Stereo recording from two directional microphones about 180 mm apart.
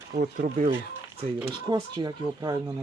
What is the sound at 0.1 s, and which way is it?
Speech, 45° right (ahead or behind).